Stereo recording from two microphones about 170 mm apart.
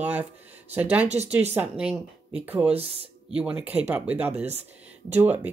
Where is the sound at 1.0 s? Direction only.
40° right (ahead or behind).